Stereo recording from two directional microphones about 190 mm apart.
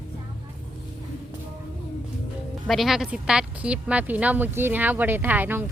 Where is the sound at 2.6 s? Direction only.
Centre (ahead or behind).